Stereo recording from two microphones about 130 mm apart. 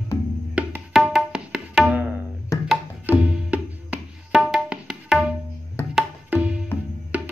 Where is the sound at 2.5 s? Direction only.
25° left (ahead or behind).